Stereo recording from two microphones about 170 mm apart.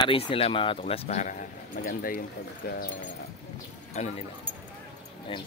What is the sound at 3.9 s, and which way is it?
Speech, 40° left (ahead or behind).